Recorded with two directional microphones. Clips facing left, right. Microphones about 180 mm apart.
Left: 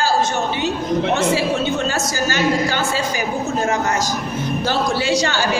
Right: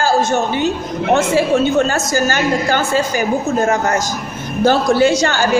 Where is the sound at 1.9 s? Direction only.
50° right (ahead or behind).